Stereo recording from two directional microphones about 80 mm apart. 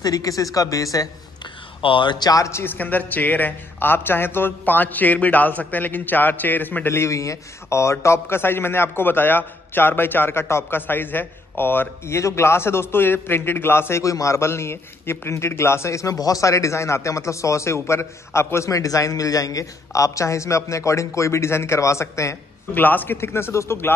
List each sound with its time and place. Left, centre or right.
0.0 s speech: left
1.4 s a sound: left
2.2 s speech: left
2.6 s a man's voice: left
22.8 s a man's voice: left